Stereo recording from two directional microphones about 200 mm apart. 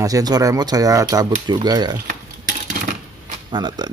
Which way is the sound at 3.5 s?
20° right (ahead or behind).